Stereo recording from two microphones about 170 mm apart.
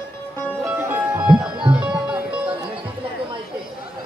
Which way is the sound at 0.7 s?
10° right (ahead or behind).